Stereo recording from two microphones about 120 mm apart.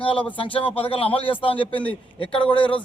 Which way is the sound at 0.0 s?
45° left (ahead or behind).